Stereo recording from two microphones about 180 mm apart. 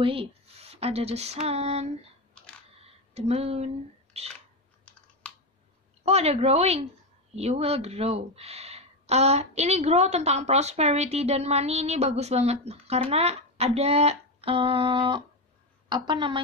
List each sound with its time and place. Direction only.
0.0 s speech: 30° right (ahead or behind)
5.2 s clicking: 5° left (ahead or behind)
6.0 s a woman's voice: 35° right (ahead or behind)